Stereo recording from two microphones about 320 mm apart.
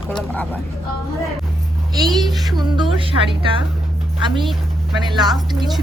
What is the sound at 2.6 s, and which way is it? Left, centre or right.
Speech, centre.